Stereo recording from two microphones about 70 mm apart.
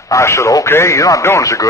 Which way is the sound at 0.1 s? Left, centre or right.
Left.